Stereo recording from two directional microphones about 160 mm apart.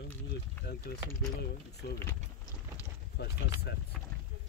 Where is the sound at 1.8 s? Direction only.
80° left.